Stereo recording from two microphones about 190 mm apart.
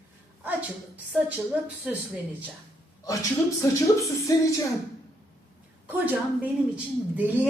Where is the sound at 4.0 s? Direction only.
15° left (ahead or behind).